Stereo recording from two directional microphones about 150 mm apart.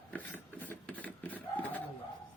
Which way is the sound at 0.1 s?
10° left (ahead or behind).